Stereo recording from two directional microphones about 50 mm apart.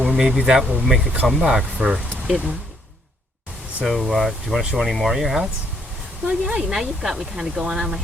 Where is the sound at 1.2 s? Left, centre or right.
Centre.